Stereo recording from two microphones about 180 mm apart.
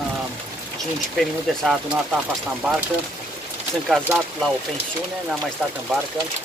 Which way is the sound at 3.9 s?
Centre (ahead or behind).